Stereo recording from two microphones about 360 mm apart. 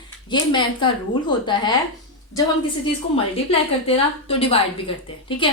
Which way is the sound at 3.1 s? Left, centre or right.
Centre.